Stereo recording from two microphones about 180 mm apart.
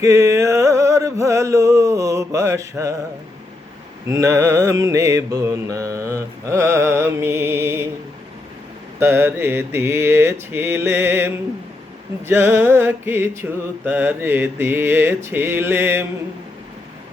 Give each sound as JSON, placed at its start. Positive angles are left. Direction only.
{"t": 0.0, "sound": "a sound", "side_deg": -15}
{"t": 4.0, "sound": "mantra", "side_deg": -15}
{"t": 9.0, "sound": "mantra", "side_deg": -10}